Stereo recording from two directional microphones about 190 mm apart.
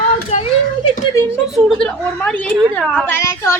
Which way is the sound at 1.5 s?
5° left (ahead or behind).